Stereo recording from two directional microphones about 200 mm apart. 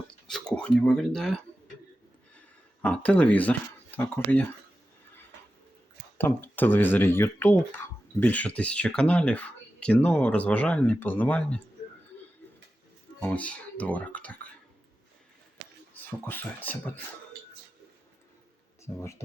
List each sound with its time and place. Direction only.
0.3 s speech: 5° left (ahead or behind)
2.8 s speech: 5° left (ahead or behind)
6.1 s speech: 10° left (ahead or behind)
13.1 s speech: 5° left (ahead or behind)
16.0 s speech: 10° left (ahead or behind)
18.9 s speech: 20° left (ahead or behind)